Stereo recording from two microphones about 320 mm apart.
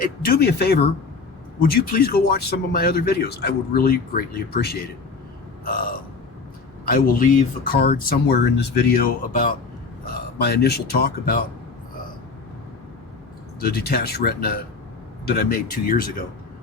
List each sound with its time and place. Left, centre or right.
0.0 s speech: left
13.6 s speech: left